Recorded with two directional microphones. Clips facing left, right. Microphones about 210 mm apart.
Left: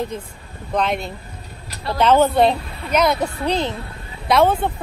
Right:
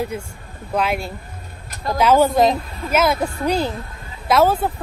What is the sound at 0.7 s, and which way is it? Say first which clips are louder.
Speech: even; 5° right (ahead or behind).